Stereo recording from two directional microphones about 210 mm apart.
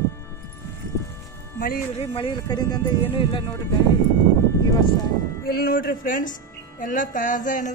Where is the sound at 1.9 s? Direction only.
25° left (ahead or behind).